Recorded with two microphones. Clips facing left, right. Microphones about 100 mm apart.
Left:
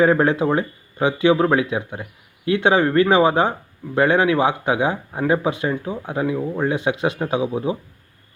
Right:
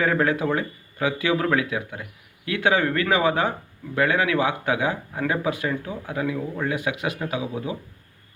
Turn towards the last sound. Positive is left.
turn(degrees=25)  # may be behind; listen again after turning